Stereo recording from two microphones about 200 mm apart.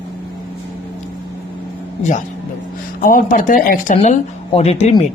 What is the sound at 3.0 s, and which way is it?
A woman's voice, 45° left (ahead or behind).